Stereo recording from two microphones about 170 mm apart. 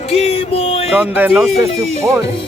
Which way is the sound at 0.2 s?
35° left (ahead or behind).